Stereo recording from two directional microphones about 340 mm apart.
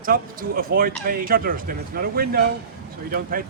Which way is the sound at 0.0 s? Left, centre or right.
Right.